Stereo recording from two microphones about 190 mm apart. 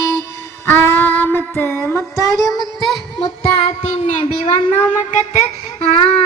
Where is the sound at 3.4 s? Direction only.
35° left (ahead or behind).